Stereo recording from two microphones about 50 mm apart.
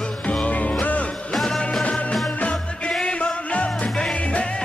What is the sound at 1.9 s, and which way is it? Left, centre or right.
Music, left.